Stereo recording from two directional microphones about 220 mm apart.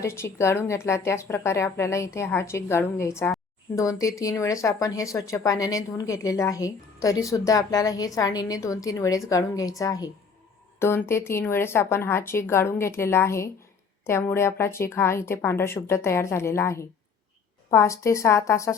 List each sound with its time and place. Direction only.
0.0 s a woman's voice: 10° left (ahead or behind)